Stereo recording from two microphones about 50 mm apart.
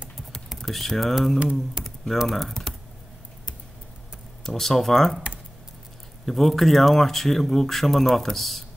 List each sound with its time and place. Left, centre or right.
0.6 s speech: centre
1.4 s speech: right
2.2 s speech: centre
4.4 s speech: centre
6.2 s speech: centre